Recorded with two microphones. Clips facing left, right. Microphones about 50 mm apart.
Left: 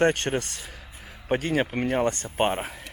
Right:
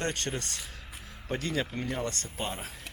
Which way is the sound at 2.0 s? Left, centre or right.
Left.